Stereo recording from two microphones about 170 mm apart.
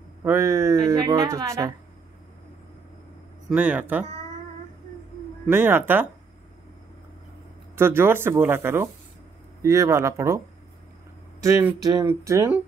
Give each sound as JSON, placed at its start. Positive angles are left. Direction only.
{"t": 0.2, "sound": "a woman's voice", "side_deg": -15}
{"t": 3.4, "sound": "a woman's voice", "side_deg": -10}
{"t": 5.5, "sound": "a woman's voice", "side_deg": -15}
{"t": 7.7, "sound": "a woman's voice", "side_deg": -15}
{"t": 11.4, "sound": "a woman's voice", "side_deg": -20}